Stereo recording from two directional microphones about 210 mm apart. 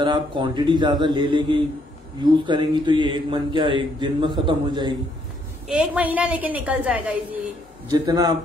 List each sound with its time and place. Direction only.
0.0 s a man's voice: 20° right (ahead or behind)
5.7 s a woman's voice: 5° right (ahead or behind)
7.9 s a woman's voice: 20° right (ahead or behind)